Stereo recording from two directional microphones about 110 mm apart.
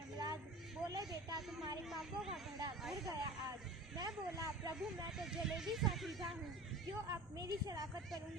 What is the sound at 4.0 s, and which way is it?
Snake, 35° right (ahead or behind).